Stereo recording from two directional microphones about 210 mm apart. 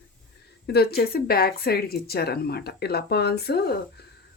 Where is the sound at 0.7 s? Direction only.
50° left (ahead or behind).